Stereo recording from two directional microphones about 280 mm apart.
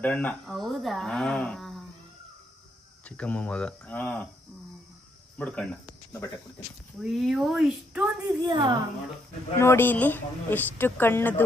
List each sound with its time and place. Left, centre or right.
0.0 s speech: centre
3.1 s speech: centre
5.4 s speech: centre
7.0 s speech: centre
8.5 s speech: centre
9.6 s speech: centre